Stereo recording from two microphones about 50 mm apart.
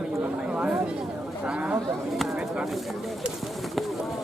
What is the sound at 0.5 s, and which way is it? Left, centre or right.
Chatter, right.